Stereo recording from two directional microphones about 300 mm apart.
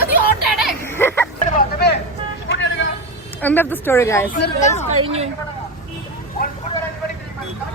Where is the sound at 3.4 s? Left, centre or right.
Centre.